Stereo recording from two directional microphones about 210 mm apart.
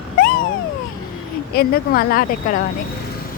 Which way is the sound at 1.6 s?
45° left (ahead or behind).